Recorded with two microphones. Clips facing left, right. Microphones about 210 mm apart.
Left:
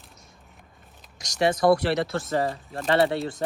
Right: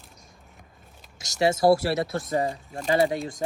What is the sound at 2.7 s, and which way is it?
Speech, centre (ahead or behind).